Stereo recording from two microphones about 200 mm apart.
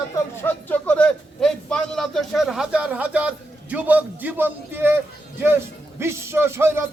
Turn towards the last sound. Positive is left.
turn(degrees=-10)  # may be behind; listen again after turning